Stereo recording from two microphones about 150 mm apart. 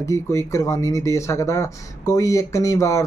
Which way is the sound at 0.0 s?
20° left (ahead or behind).